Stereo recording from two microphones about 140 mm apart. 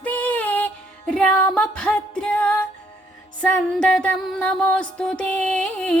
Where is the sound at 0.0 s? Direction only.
10° left (ahead or behind).